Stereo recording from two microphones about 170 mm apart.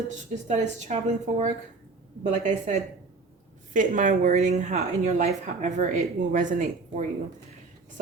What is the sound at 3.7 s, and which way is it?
Speech, 50° right (ahead or behind).